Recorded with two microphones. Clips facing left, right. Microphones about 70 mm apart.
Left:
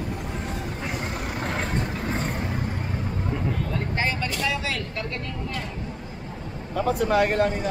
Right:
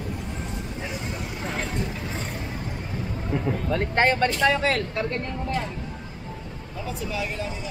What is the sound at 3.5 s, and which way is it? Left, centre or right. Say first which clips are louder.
Speech: right 3 dB; right.